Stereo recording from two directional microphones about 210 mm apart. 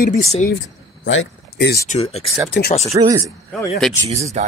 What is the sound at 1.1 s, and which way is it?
Speech, 55° left (ahead or behind).